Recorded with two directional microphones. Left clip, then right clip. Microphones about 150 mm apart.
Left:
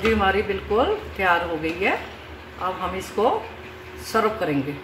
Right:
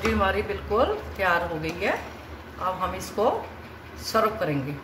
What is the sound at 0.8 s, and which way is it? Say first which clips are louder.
Speech: left 1 dB; 30° left (ahead or behind).